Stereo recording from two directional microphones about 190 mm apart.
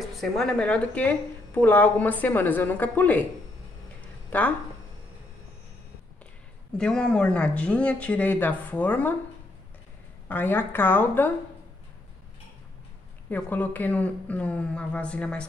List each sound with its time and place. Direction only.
0.1 s a woman's voice: centre (ahead or behind)
4.3 s speech: 10° left (ahead or behind)
6.8 s a woman's voice: 5° left (ahead or behind)
10.2 s a woman's voice: 10° left (ahead or behind)
13.3 s a woman's voice: 10° left (ahead or behind)